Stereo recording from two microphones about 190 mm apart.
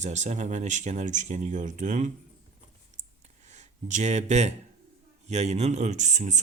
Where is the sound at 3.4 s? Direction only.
40° right (ahead or behind).